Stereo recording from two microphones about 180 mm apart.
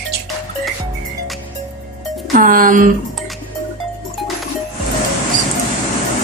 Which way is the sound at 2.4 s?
50° right (ahead or behind).